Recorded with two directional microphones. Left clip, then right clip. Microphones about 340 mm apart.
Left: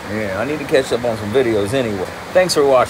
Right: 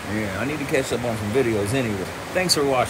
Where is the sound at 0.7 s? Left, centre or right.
Centre.